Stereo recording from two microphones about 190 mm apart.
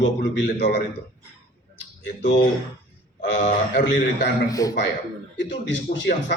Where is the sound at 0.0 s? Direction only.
70° left (ahead or behind).